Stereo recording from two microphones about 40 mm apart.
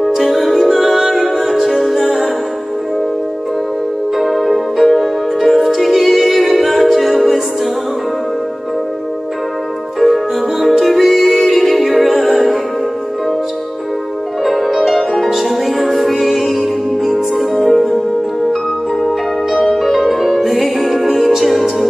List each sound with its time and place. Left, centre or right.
0.1 s music: centre
4.2 s music: centre
9.9 s music: centre
14.4 s music: centre
19.8 s music: centre